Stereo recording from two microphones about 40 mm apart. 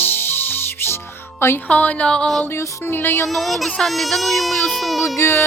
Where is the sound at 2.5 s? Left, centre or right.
Left.